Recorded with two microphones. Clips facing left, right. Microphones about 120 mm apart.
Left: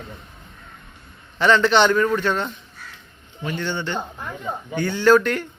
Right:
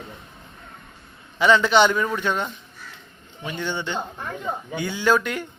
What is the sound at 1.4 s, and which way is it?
A man's voice, 10° right (ahead or behind).